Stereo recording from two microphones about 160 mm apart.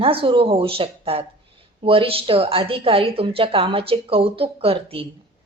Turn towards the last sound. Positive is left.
turn(degrees=-35)  # may be behind; listen again after turning